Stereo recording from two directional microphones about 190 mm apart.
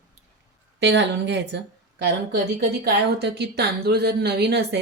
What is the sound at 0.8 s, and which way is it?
A woman's voice, 65° right (ahead or behind).